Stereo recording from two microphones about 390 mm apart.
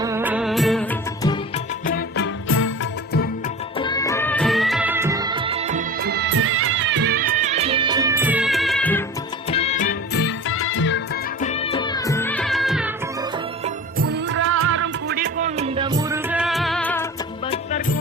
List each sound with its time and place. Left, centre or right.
0.0 s music of bollywood: centre
1.9 s music: left
3.8 s music: centre
9.5 s music: centre
14.0 s music: right; by 17.1 s centre
17.5 s music: centre